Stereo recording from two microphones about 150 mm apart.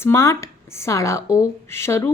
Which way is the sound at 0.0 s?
20° left (ahead or behind).